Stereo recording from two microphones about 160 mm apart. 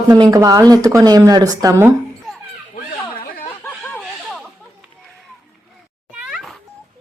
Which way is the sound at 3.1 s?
65° left (ahead or behind).